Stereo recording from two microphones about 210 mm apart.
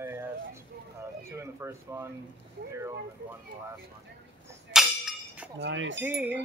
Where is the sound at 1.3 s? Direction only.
15° right (ahead or behind).